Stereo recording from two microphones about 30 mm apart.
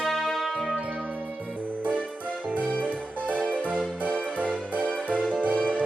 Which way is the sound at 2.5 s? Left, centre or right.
Right.